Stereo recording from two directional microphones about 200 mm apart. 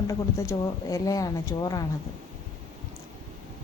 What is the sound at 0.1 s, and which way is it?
Speech, 15° left (ahead or behind).